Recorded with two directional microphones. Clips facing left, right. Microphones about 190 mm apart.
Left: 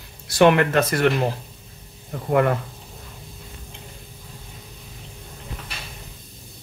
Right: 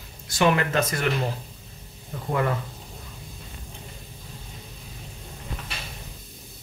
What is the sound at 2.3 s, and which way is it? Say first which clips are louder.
Speech: left 6 dB; 55° left (ahead or behind).